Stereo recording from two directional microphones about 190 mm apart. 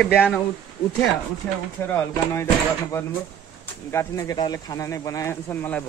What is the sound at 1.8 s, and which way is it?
Speech, 15° left (ahead or behind).